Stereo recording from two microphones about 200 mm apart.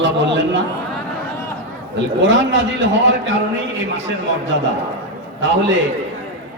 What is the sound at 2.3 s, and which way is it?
A man's voice, 65° right (ahead or behind).